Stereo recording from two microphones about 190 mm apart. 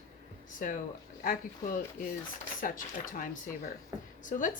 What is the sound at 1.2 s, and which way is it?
Speech, 45° left (ahead or behind).